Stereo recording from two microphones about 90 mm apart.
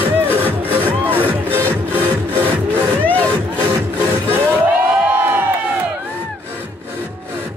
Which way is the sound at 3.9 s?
20° right (ahead or behind).